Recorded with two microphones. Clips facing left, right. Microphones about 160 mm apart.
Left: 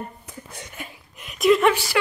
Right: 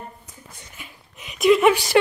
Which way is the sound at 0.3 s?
75° left (ahead or behind).